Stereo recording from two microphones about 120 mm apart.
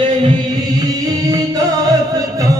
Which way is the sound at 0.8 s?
30° right (ahead or behind).